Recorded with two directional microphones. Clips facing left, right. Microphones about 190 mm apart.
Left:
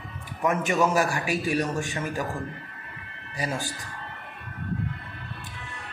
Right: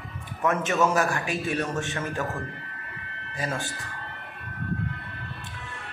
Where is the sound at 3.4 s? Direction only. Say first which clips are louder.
Left 1 dB; 10° left (ahead or behind).